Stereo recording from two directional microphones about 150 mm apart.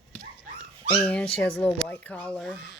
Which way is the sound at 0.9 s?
10° left (ahead or behind).